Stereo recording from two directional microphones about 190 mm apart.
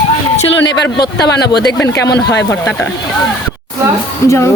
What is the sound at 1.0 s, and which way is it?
Speech, 60° left (ahead or behind).